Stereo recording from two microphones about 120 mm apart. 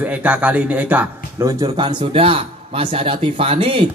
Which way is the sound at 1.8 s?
45° right (ahead or behind).